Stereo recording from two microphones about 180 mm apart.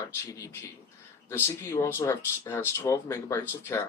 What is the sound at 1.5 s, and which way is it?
Speech, 15° left (ahead or behind).